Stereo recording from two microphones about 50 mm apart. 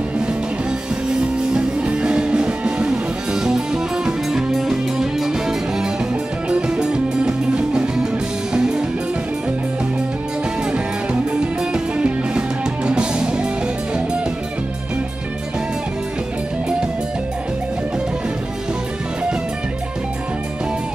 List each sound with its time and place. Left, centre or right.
1.0 s music: centre
10.7 s music: right